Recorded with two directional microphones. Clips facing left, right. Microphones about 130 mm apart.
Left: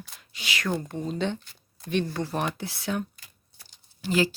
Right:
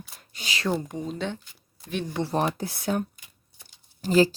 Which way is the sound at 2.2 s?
35° right (ahead or behind).